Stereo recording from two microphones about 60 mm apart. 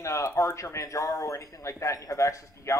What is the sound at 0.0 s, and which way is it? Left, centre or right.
Speech, left.